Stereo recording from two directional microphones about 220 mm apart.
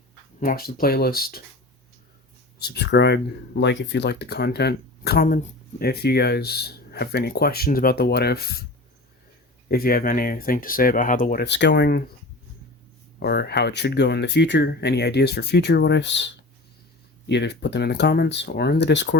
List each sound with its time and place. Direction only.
0.3 s speech: 40° left (ahead or behind)
2.6 s speech: 45° left (ahead or behind)
9.6 s speech: 45° left (ahead or behind)
13.1 s speech: 45° left (ahead or behind)